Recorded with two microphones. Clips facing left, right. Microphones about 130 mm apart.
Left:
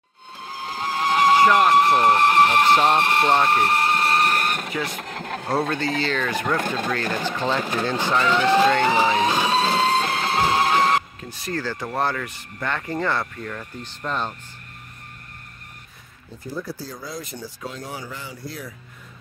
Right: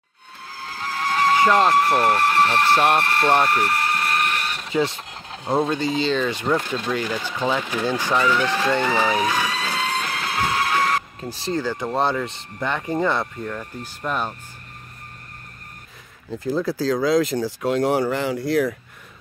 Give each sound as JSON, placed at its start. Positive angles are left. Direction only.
{"t": 0.5, "sound": "vehicle", "side_deg": 20}
{"t": 1.7, "sound": "speech", "side_deg": 20}
{"t": 3.4, "sound": "a sound", "side_deg": 25}
{"t": 4.7, "sound": "speech", "side_deg": -25}
{"t": 5.0, "sound": "a sound", "side_deg": 55}
{"t": 5.5, "sound": "speech", "side_deg": -20}
{"t": 8.3, "sound": "speech", "side_deg": 20}
{"t": 8.8, "sound": "vehicle", "side_deg": 20}
{"t": 11.2, "sound": "speech", "side_deg": -30}
{"t": 11.5, "sound": "speech", "side_deg": -20}
{"t": 16.3, "sound": "speech", "side_deg": -90}